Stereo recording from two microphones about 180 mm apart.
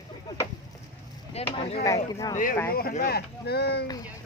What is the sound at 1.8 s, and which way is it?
Speech, 20° left (ahead or behind).